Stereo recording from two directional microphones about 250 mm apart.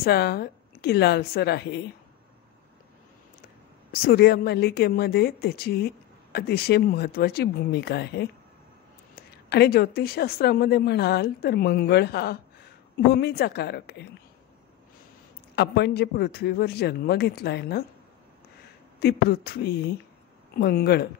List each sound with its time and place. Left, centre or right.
0.0 s speech: left
3.9 s speech: left
15.5 s speech: left
18.9 s speech: left